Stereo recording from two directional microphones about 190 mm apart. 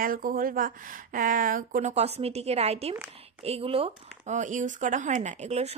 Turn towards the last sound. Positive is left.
turn(degrees=-35)  # may be behind; listen again after turning